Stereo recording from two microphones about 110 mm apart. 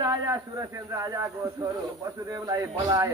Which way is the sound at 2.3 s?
30° right (ahead or behind).